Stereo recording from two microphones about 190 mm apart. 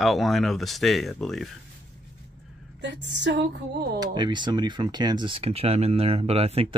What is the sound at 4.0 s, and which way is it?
Speech, 25° right (ahead or behind).